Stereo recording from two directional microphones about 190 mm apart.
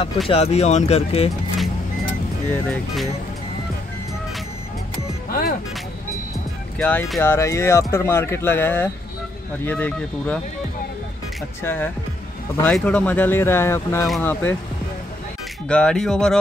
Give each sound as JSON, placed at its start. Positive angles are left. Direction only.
{"t": 0.3, "sound": "speech", "side_deg": 35}
{"t": 2.5, "sound": "speech", "side_deg": 10}
{"t": 5.3, "sound": "music", "side_deg": 50}
{"t": 6.8, "sound": "speech", "side_deg": 5}
{"t": 11.6, "sound": "speech", "side_deg": 10}
{"t": 15.7, "sound": "speech", "side_deg": 5}